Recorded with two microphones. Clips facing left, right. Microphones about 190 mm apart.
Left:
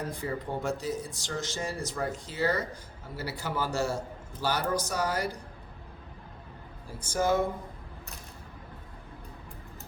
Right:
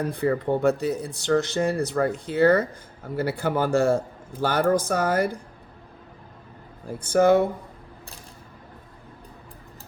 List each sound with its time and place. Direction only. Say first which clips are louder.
0.1 s speech: right 10 dB; 60° right (ahead or behind)
6.8 s speech: right 10 dB; 60° right (ahead or behind)